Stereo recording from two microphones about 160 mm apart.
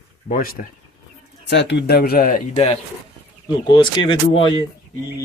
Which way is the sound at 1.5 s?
90° left.